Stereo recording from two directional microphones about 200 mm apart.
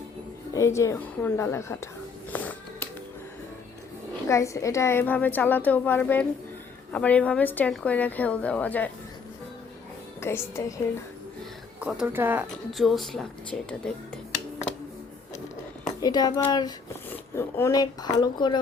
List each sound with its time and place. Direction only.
0.5 s a woman's voice: 15° left (ahead or behind)
2.3 s a sound: 5° left (ahead or behind)
4.3 s a woman's voice: 15° left (ahead or behind)
10.2 s a woman's voice: 10° left (ahead or behind)
11.8 s speech: 5° right (ahead or behind)
16.0 s speech: 20° left (ahead or behind)